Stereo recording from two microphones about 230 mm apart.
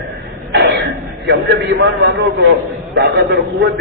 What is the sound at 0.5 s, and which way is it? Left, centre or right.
Cough, right.